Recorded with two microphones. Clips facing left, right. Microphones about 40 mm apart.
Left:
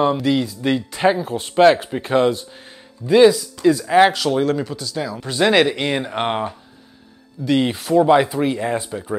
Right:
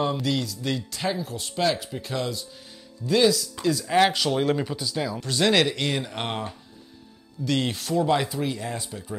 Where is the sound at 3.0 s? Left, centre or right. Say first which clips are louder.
Left 9 dB; left.